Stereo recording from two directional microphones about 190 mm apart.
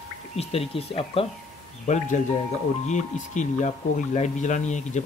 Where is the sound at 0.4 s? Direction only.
30° left (ahead or behind).